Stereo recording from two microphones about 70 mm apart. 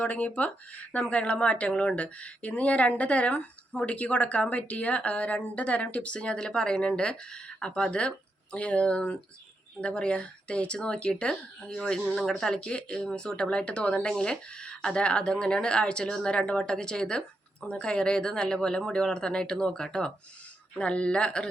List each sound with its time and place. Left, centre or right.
0.0 s speech: left